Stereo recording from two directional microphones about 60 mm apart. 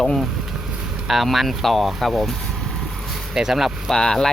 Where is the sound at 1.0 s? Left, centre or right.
Centre.